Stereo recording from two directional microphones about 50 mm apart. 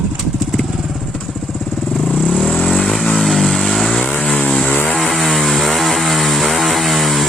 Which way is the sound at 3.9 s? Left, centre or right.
Centre.